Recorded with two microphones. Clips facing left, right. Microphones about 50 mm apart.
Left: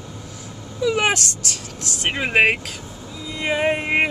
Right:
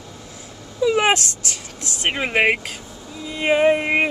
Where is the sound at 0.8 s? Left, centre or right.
Centre.